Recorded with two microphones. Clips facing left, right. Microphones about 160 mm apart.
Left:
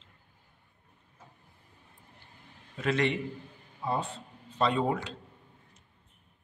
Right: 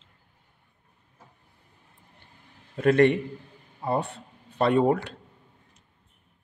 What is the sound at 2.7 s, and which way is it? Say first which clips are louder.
A man's voice: right 9 dB; 55° right (ahead or behind).